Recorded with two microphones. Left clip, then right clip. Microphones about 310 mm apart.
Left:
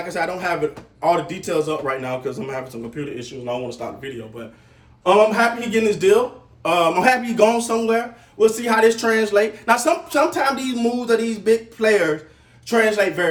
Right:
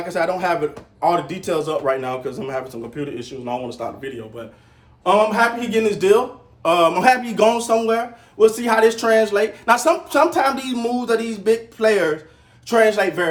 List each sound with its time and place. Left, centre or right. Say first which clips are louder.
0.1 s a man's voice: right 4 dB; centre